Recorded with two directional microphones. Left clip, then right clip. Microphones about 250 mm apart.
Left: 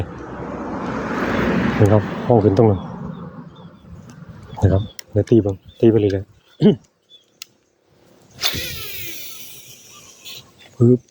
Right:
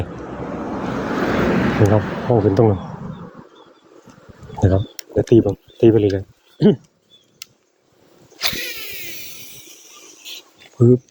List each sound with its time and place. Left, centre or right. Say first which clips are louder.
0.3 s vehicle: right 1 dB; right
2.0 s speech: even; right
2.3 s speech: left 1 dB; centre
4.6 s speech: right 1 dB; centre
8.4 s a sound: even; centre
10.8 s speech: right 1 dB; centre